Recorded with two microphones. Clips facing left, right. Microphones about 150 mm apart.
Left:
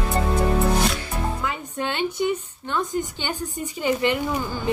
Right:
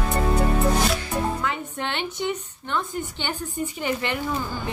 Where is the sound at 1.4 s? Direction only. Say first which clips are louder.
Left 1 dB; 10° left (ahead or behind).